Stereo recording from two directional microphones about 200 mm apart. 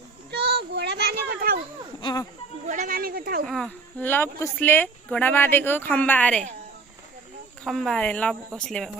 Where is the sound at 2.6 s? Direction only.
40° right (ahead or behind).